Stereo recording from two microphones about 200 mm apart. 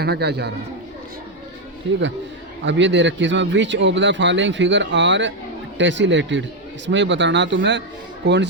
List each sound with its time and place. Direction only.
0.0 s a man's voice: 55° right (ahead or behind)
2.6 s a man's voice: 65° right (ahead or behind)